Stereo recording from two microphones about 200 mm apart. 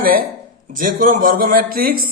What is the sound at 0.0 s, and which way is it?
A man's voice, 45° right (ahead or behind).